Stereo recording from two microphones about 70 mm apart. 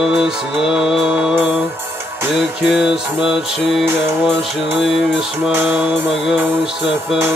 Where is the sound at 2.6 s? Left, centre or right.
Centre.